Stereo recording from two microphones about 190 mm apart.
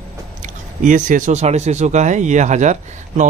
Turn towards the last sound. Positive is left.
turn(degrees=-40)  # may be behind; listen again after turning